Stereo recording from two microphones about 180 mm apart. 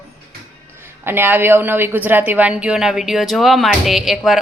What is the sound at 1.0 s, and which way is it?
A woman's voice, 10° right (ahead or behind).